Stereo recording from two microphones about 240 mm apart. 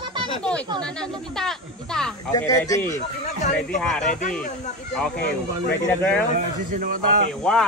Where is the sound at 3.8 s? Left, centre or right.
Centre.